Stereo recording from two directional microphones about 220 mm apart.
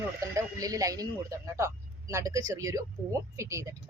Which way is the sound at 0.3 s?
15° right (ahead or behind).